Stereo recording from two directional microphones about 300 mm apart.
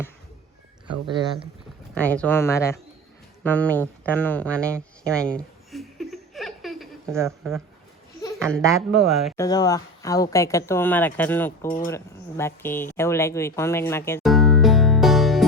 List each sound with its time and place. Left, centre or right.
0.9 s speech: centre
2.0 s speech: centre
3.4 s a sound: centre
9.0 s speech: centre
9.4 s speech: centre